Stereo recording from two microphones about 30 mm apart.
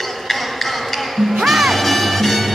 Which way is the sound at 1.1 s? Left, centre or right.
Centre.